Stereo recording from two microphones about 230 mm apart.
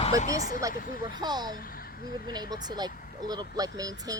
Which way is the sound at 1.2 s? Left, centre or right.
Centre.